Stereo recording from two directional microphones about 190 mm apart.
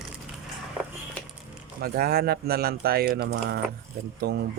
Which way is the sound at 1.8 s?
50° right (ahead or behind).